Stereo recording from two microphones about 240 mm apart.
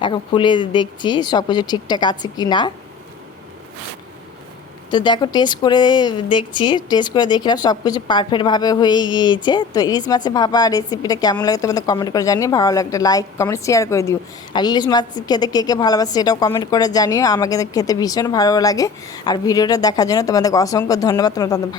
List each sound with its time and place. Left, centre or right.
0.0 s a woman's voice: centre
4.9 s a woman's voice: centre